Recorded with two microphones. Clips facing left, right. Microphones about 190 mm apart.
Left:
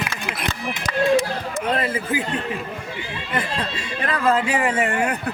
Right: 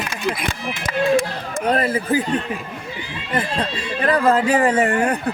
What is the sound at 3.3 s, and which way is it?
Speech, 35° right (ahead or behind).